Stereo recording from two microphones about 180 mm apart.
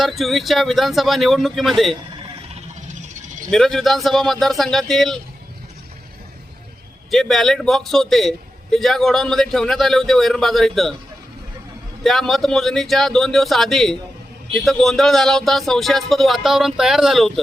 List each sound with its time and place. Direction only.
0.0 s a man's voice: centre (ahead or behind)
2.8 s music: 40° right (ahead or behind)
3.5 s a man's voice: centre (ahead or behind)
7.1 s a man's voice: centre (ahead or behind)
12.0 s a man's voice: centre (ahead or behind)